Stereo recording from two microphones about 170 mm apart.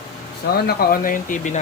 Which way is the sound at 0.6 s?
60° left (ahead or behind).